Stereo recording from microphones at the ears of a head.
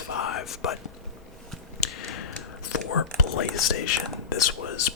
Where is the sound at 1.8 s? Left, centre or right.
Left.